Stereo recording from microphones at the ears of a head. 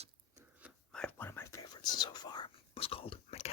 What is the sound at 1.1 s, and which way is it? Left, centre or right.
Whispering, left.